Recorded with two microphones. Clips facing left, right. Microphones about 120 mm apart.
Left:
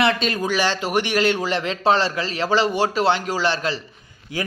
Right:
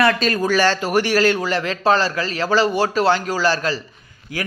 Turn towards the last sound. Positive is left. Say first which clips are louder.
# even
turn(degrees=25)  # may be behind; listen again after turning